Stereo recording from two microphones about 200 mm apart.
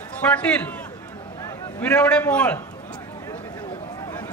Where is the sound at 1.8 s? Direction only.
5° left (ahead or behind).